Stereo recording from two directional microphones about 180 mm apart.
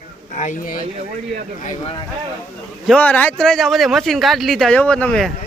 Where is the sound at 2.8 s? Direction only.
5° left (ahead or behind).